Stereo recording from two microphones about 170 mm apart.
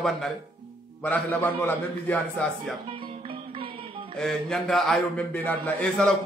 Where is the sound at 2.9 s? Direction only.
30° right (ahead or behind).